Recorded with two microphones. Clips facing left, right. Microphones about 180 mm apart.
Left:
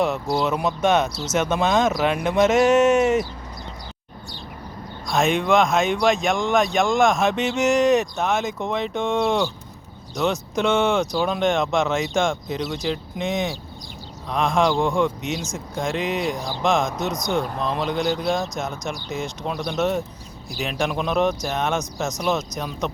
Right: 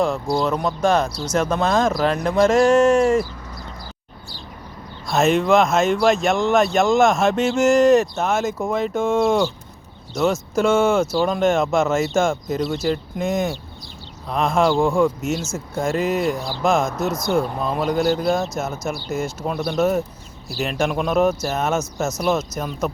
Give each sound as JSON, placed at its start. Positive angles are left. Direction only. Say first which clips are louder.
{"t": 0.0, "sound": "speech", "louder": "right 2 dB", "side_deg": 5}
{"t": 5.0, "sound": "speech", "louder": "right 3 dB", "side_deg": -5}
{"t": 10.5, "sound": "speech", "louder": "right 3 dB", "side_deg": 0}